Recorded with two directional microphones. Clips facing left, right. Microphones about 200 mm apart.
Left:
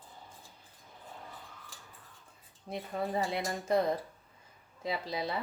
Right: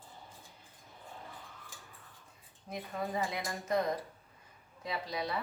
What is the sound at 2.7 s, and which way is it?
Speech, 30° left (ahead or behind).